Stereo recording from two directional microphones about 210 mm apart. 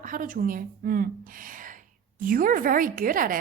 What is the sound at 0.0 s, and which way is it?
Speech, 40° right (ahead or behind).